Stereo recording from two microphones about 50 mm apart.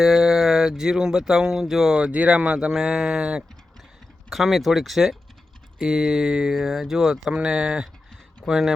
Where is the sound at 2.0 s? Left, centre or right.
Right.